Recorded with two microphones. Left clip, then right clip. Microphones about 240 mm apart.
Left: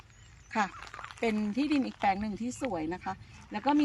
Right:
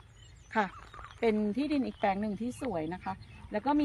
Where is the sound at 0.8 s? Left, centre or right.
Left.